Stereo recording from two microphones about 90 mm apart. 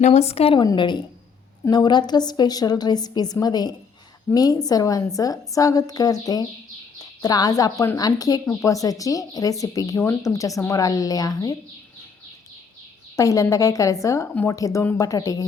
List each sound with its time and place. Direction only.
0.3 s a woman's voice: 90° left
0.8 s a woman's voice: 60° left (ahead or behind); by 11.5 s 40° left (ahead or behind)
13.1 s speech: 35° left (ahead or behind)